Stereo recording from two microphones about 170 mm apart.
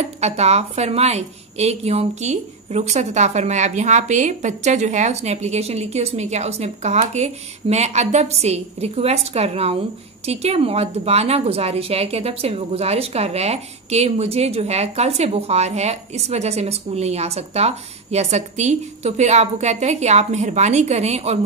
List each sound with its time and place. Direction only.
0.0 s a woman's voice: 40° right (ahead or behind)